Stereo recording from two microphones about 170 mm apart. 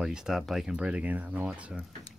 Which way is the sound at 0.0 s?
5° right (ahead or behind).